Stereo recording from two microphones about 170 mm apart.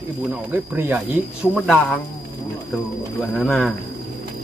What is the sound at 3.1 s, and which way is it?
Speech, centre (ahead or behind).